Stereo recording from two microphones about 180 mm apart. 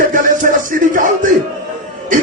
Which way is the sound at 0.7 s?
45° right (ahead or behind).